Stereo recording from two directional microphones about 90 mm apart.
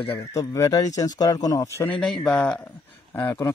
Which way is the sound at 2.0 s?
5° left (ahead or behind).